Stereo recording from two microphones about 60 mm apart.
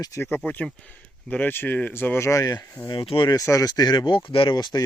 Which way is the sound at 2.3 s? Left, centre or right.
Left.